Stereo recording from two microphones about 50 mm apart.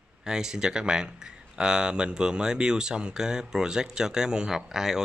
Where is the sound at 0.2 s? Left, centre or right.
Centre.